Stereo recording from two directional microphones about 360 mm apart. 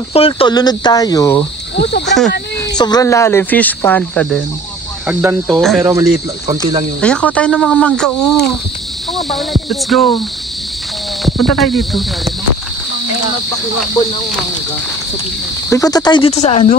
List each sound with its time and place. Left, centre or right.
0.1 s speech: centre
1.8 s speech: left
2.0 s speech: centre
2.7 s speech: centre
5.0 s cricket: centre
7.0 s speech: centre
11.2 s speech: centre
15.7 s speech: centre